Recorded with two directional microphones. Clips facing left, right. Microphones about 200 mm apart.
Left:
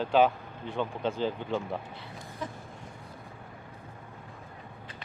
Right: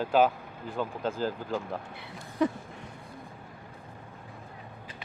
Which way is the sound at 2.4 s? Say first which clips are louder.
Right 13 dB; 70° right (ahead or behind).